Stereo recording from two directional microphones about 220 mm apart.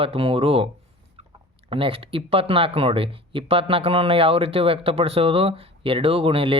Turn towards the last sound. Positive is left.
turn(degrees=-25)  # may be behind; listen again after turning